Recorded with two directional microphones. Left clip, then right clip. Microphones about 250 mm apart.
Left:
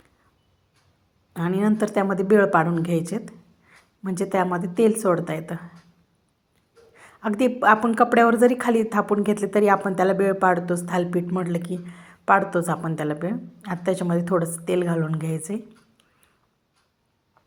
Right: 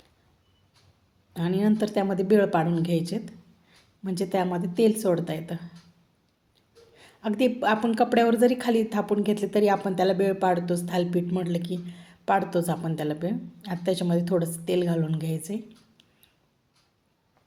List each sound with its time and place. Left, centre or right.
1.3 s speech: centre
3.2 s a sound: centre
4.5 s speech: centre
6.9 s speech: centre